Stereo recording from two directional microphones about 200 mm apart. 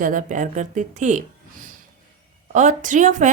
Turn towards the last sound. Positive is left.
turn(degrees=-40)  # may be behind; listen again after turning